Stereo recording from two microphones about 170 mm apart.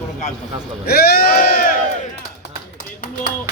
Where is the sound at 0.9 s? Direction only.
65° left (ahead or behind).